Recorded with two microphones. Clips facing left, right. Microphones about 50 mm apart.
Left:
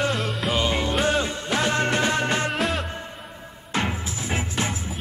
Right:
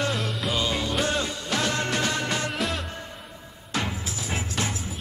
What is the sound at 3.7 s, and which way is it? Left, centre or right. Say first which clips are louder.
Music: left 3 dB; left.